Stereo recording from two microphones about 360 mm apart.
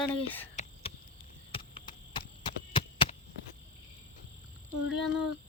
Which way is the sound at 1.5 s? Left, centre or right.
Centre.